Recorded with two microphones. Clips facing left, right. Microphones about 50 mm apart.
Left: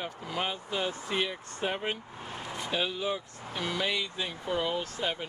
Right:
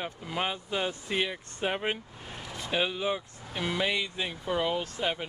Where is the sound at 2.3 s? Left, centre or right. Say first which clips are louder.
Left 2 dB; left.